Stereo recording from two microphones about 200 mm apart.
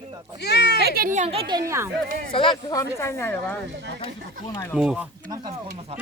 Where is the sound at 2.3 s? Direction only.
25° left (ahead or behind).